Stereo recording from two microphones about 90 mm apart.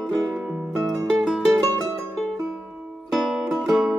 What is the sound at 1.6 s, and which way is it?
Music, 40° right (ahead or behind).